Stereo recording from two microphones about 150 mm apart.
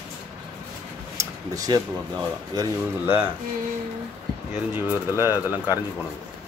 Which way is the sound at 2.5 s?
25° right (ahead or behind).